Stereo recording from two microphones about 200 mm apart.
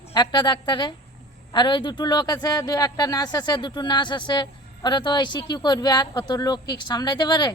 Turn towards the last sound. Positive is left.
turn(degrees=20)  # may be behind; listen again after turning